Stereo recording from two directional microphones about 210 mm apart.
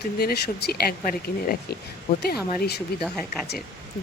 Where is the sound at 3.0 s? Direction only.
Centre (ahead or behind).